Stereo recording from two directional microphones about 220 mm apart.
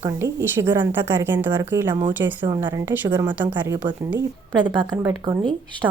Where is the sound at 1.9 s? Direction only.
20° right (ahead or behind).